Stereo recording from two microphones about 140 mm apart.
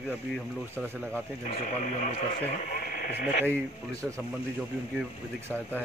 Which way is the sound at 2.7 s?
90° left.